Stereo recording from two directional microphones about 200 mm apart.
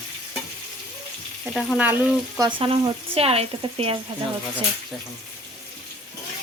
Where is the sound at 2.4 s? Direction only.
30° right (ahead or behind).